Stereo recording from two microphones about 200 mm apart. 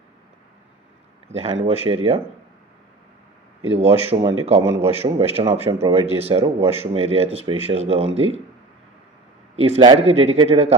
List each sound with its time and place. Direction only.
1.3 s speech: 30° right (ahead or behind)
3.7 s speech: 30° right (ahead or behind)
9.6 s speech: 30° right (ahead or behind)